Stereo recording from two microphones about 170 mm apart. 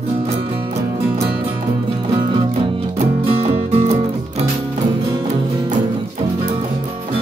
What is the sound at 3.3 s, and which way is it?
Music, 35° right (ahead or behind).